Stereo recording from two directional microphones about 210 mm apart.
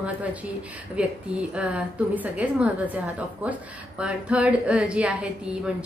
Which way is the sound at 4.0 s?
5° right (ahead or behind).